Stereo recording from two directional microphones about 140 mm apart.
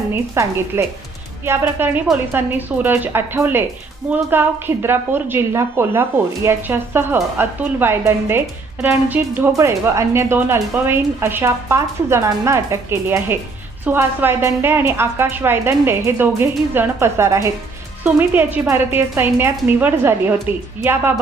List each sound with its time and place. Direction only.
0.1 s a woman's voice: 20° right (ahead or behind)